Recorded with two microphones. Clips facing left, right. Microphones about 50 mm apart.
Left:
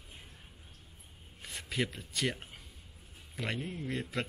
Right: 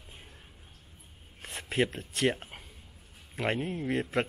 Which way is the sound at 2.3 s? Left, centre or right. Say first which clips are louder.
Right 4 dB; right.